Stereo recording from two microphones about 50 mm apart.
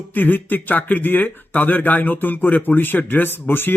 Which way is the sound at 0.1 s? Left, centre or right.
Left.